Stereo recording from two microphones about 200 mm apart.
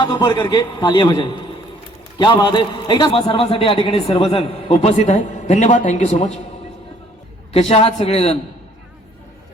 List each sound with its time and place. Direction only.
0.0 s a man's voice: 20° left (ahead or behind)
7.5 s a man's voice: 30° left (ahead or behind)